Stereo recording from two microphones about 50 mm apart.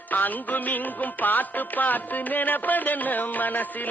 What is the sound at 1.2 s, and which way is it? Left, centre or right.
Music, left.